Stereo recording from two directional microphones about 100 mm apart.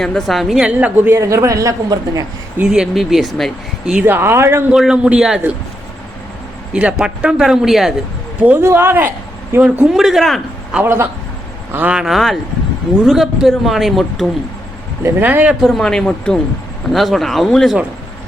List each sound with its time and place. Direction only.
0.0 s speech: 5° left (ahead or behind)
0.7 s speech: 15° right (ahead or behind)
1.2 s a woman's voice: 30° right (ahead or behind)
2.6 s speech: 5° right (ahead or behind)
3.9 s speech: 20° right (ahead or behind)
4.7 s speech: 5° right (ahead or behind)
6.7 s speech: 10° right (ahead or behind)
8.4 s speech: 20° right (ahead or behind)
9.9 s a man's voice: 5° right (ahead or behind)
10.8 s speech: 25° right (ahead or behind)
11.7 s speech: 15° right (ahead or behind)
15.0 s speech: 20° right (ahead or behind)
15.6 s speech: 5° left (ahead or behind)